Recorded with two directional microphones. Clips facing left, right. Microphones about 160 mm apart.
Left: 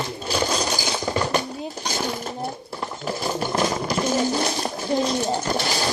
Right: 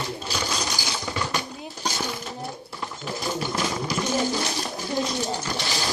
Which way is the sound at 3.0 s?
45° left (ahead or behind).